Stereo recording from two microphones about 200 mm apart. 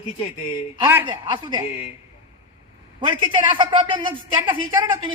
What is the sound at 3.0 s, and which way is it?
A woman's voice, 25° right (ahead or behind).